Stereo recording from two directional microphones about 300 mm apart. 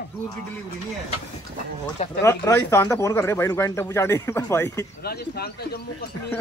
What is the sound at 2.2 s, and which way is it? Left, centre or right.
Speech, centre.